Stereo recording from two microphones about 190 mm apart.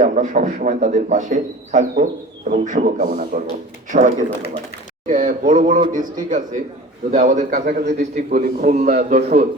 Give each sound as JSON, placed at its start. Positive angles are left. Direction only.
{"t": 0.0, "sound": "a man's voice", "side_deg": -40}